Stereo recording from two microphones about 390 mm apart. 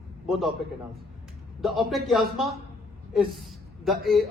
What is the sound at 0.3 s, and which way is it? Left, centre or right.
Speech, centre.